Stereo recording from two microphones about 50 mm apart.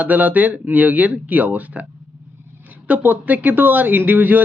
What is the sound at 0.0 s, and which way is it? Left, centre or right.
Speech, right.